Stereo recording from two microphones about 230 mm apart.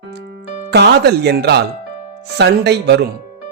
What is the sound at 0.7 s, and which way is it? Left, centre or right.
Speech, right.